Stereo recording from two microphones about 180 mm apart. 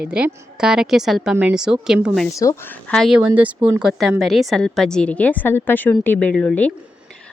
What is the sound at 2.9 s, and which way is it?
A woman's voice, centre (ahead or behind).